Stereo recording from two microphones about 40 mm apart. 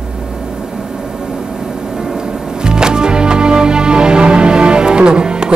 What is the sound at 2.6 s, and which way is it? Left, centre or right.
Music, centre.